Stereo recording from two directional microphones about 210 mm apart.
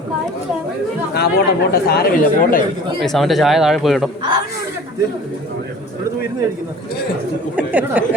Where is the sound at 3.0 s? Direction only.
Centre (ahead or behind).